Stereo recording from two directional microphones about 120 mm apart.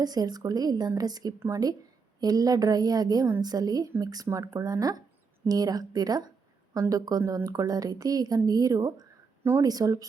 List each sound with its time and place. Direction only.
0.0 s a woman's voice: 35° right (ahead or behind)